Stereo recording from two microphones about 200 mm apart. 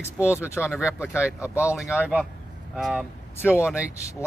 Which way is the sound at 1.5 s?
10° left (ahead or behind).